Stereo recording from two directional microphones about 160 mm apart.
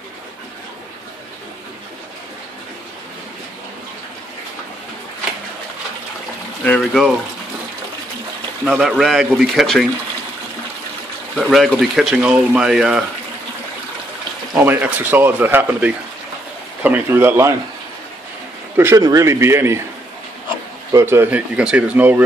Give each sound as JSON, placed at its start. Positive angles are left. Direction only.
{"t": 6.6, "sound": "speech", "side_deg": 5}
{"t": 8.6, "sound": "speech", "side_deg": 0}
{"t": 11.3, "sound": "speech", "side_deg": 0}
{"t": 14.5, "sound": "speech", "side_deg": -10}
{"t": 18.8, "sound": "speech", "side_deg": -20}
{"t": 20.9, "sound": "speech", "side_deg": -15}